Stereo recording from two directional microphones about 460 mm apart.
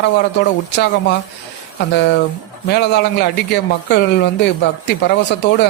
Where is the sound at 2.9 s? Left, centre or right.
Left.